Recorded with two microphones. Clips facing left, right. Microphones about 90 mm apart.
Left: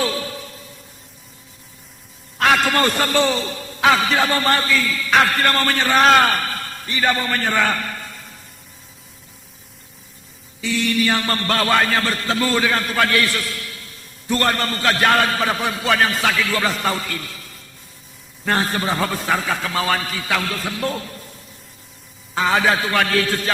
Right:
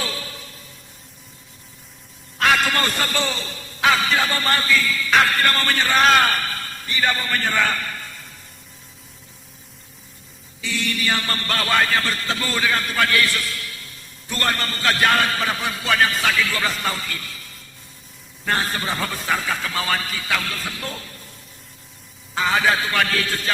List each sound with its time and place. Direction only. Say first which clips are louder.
0.0 s a sound: left 7 dB; 45° left (ahead or behind)
2.4 s a man's voice: left 3 dB; 40° left (ahead or behind)
10.8 s a man's voice: left 5 dB; 40° left (ahead or behind)
18.4 s a man's voice: left 3 dB; 45° left (ahead or behind)
22.4 s a man's voice: left 2 dB; 50° left (ahead or behind)